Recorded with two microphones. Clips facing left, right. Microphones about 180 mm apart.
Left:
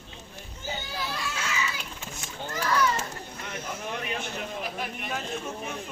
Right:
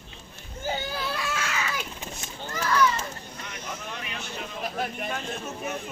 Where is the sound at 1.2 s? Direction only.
55° right (ahead or behind).